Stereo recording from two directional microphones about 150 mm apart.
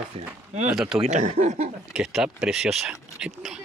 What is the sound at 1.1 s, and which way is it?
Speech, 55° right (ahead or behind).